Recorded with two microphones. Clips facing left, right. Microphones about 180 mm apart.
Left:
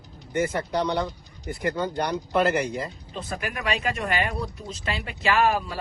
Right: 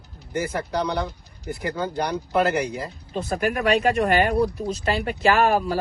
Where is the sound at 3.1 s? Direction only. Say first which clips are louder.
Right 9 dB; 40° right (ahead or behind).